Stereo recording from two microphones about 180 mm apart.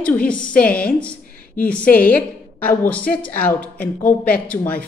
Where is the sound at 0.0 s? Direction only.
5° left (ahead or behind).